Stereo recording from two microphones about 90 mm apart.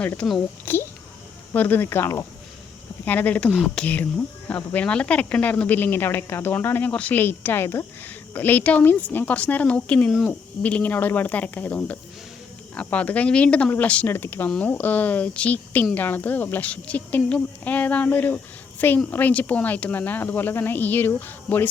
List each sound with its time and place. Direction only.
0.0 s a child's voice: 15° left (ahead or behind); by 2.2 s 30° left (ahead or behind)
3.0 s a woman's voice: 20° left (ahead or behind)